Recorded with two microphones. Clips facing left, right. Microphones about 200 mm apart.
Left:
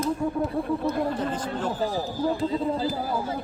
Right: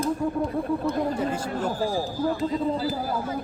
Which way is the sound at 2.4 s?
30° left (ahead or behind).